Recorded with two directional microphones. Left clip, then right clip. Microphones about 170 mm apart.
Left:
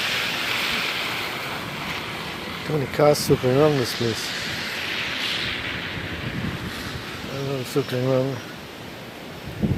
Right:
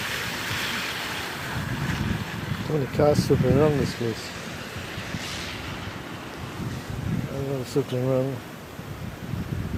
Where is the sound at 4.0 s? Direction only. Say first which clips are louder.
Left 5 dB; 60° right (ahead or behind); by 5.8 s 35° right (ahead or behind).